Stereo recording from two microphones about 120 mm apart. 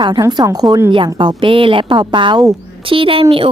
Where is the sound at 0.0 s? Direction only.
35° right (ahead or behind).